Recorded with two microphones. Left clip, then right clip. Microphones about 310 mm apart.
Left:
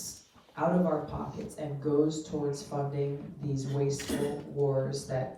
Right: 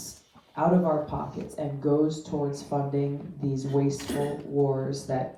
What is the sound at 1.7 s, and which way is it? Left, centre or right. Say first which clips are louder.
Speech: right 3 dB; centre.